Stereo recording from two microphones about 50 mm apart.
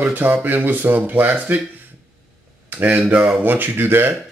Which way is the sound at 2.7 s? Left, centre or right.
Right.